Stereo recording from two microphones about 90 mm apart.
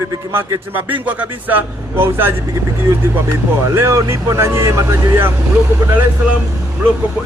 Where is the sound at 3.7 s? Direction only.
30° right (ahead or behind).